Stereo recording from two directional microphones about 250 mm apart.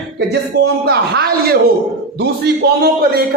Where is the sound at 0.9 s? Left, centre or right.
Right.